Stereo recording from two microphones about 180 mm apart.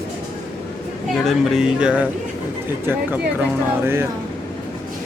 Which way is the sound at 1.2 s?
Centre (ahead or behind).